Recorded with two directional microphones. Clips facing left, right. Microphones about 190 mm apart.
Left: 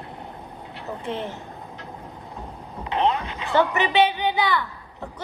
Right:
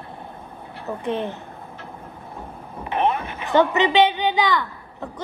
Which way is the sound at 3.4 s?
20° right (ahead or behind).